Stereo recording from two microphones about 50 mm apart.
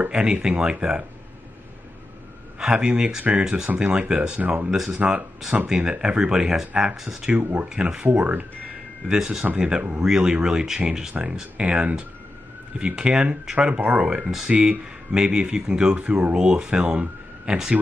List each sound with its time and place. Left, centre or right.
0.1 s speech: centre
2.6 s speech: centre
4.6 s speech: centre
7.2 s speech: right
7.7 s speech: centre
8.1 s speech: right
9.0 s speech: centre; by 16.3 s right
16.3 s speech: centre